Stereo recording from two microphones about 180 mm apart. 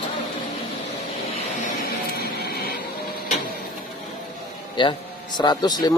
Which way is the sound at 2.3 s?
60° left (ahead or behind).